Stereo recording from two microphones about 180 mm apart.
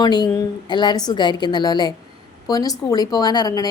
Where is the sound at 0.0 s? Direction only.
25° left (ahead or behind).